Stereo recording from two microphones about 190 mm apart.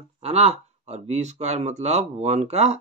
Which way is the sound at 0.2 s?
30° right (ahead or behind).